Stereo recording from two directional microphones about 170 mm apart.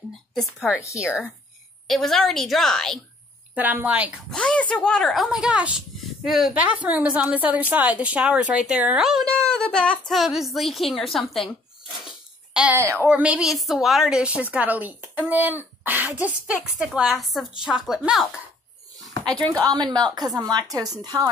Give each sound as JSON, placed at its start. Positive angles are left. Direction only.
{"t": 0.3, "sound": "speech", "side_deg": 0}
{"t": 3.5, "sound": "a woman's voice", "side_deg": -10}
{"t": 4.3, "sound": "speech", "side_deg": 5}
{"t": 12.5, "sound": "a woman's voice", "side_deg": -10}
{"t": 19.6, "sound": "speech", "side_deg": -25}